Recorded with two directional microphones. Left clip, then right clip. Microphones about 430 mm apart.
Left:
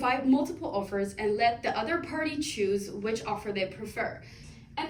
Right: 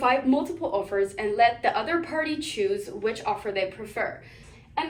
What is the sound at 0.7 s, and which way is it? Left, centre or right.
A woman's voice, centre.